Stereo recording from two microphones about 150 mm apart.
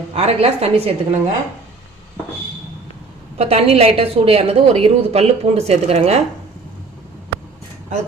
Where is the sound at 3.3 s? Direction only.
45° right (ahead or behind).